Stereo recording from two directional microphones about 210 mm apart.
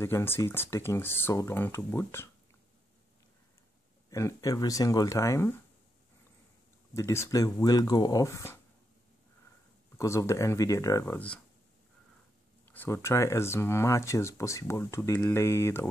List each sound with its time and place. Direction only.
0.0 s speech: 10° left (ahead or behind)
4.1 s speech: 15° left (ahead or behind)
6.9 s speech: 15° left (ahead or behind)
9.9 s speech: 15° left (ahead or behind)
12.7 s speech: 10° left (ahead or behind)